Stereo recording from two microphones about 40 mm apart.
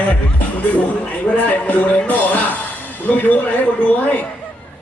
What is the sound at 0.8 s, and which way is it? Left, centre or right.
A man's voice, left.